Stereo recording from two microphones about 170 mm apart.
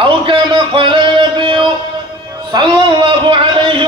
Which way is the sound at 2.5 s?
30° right (ahead or behind).